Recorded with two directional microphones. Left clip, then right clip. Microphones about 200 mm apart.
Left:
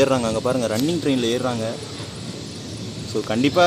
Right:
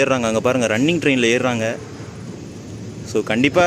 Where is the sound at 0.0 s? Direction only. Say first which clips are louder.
Right 2 dB; 15° right (ahead or behind).